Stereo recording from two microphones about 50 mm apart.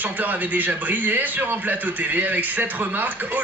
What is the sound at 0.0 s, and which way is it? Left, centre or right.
A man's voice, right.